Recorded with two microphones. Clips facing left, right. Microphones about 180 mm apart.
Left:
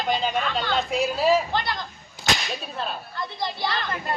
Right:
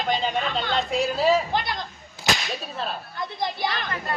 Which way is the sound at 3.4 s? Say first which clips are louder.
Right 1 dB; 15° right (ahead or behind).